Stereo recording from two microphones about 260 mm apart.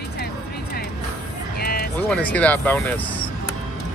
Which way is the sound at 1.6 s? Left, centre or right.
Left.